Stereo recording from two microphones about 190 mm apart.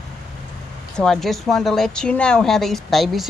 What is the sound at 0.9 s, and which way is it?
Speech, 5° left (ahead or behind).